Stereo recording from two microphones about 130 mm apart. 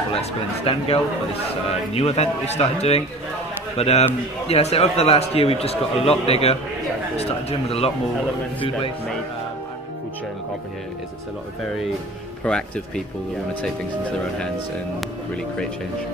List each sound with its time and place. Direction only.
0.1 s a man's voice: 50° left (ahead or behind)
12.4 s speech: 5° left (ahead or behind)